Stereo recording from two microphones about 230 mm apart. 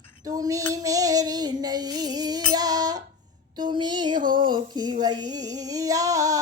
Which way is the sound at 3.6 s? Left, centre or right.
Centre.